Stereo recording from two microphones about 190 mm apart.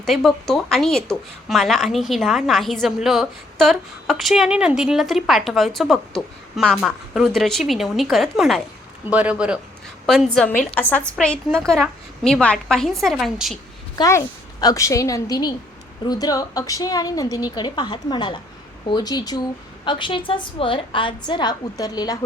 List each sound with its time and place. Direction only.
0.0 s a woman's voice: centre (ahead or behind)
13.9 s a woman's voice: 20° left (ahead or behind)